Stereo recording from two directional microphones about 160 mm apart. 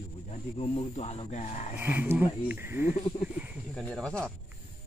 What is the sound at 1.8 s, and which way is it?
Speech, 10° right (ahead or behind).